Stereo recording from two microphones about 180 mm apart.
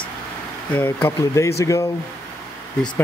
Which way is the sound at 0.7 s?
10° left (ahead or behind).